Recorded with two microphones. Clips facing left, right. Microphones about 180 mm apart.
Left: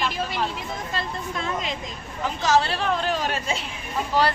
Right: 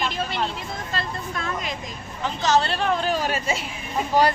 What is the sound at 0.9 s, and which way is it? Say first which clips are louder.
Speech: right 1 dB; 20° left (ahead or behind).